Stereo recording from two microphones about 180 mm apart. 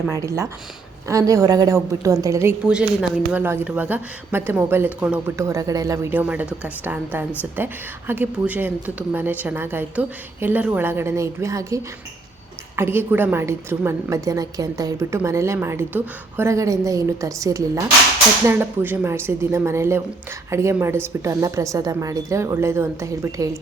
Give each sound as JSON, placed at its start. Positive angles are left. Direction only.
{"t": 0.1, "sound": "a woman's voice", "side_deg": -15}